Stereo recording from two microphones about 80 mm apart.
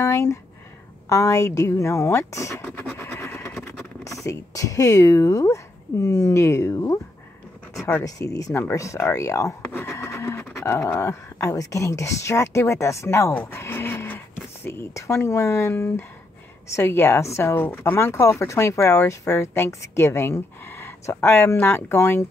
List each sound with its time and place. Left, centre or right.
0.0 s speech: left
8.0 s speech: left
13.3 s speech: left